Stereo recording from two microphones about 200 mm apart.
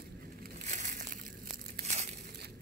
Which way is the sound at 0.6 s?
35° right (ahead or behind).